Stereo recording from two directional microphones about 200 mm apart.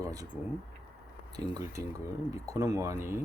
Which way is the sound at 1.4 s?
20° right (ahead or behind).